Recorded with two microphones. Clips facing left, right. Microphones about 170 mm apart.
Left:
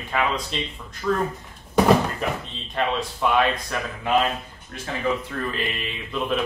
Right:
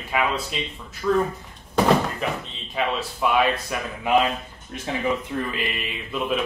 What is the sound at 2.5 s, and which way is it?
Speech, 5° right (ahead or behind).